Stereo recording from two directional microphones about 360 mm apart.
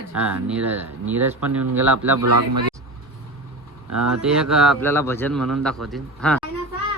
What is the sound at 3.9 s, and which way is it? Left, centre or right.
Speech, right.